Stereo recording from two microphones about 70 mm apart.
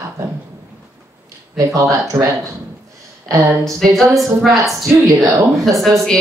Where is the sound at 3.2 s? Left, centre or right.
Right.